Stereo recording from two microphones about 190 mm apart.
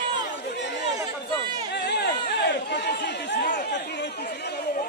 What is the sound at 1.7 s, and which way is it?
Chatter, 60° left (ahead or behind).